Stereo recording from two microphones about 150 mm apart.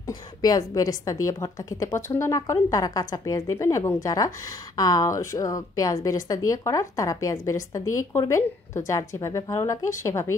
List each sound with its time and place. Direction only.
0.0 s a woman's voice: 25° left (ahead or behind)